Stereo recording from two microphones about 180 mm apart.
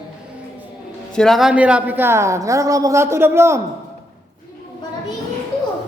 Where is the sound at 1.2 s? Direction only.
Centre (ahead or behind).